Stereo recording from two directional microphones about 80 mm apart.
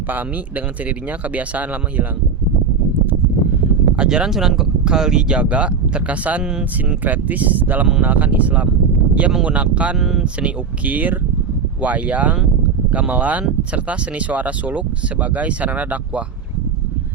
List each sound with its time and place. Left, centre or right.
0.1 s speech: right
3.9 s speech: centre
7.0 s speech: centre
10.0 s speech: centre
10.4 s speech: centre